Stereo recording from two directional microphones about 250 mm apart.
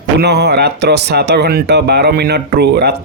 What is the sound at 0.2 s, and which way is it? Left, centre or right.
Speech, right.